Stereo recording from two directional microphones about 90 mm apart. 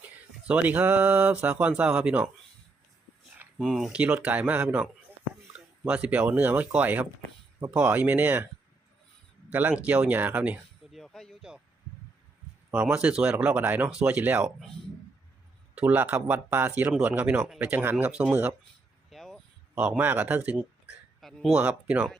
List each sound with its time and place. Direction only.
0.4 s speech: 15° right (ahead or behind)
3.6 s speech: 5° right (ahead or behind)
5.9 s speech: 15° right (ahead or behind)
9.5 s speech: 20° right (ahead or behind)
10.9 s speech: 5° left (ahead or behind)
12.9 s speech: 10° right (ahead or behind)
15.7 s speech: 20° right (ahead or behind)
19.1 s a sound: centre (ahead or behind)
19.7 s speech: 15° right (ahead or behind)
21.2 s a sound: centre (ahead or behind)
21.5 s speech: 10° right (ahead or behind)